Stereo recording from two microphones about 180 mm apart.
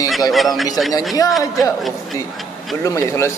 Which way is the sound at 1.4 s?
20° left (ahead or behind).